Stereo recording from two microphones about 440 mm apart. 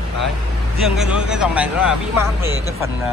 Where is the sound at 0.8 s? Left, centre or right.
Centre.